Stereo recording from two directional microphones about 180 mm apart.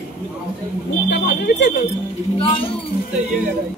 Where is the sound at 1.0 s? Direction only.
70° left (ahead or behind).